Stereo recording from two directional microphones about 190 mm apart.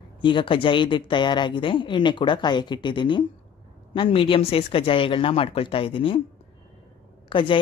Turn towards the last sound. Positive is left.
turn(degrees=25)  # may be behind; listen again after turning